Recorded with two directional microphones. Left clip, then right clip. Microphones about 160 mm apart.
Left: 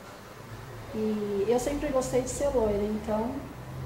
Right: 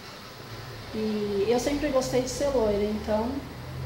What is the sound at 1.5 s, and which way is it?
Speech, centre (ahead or behind).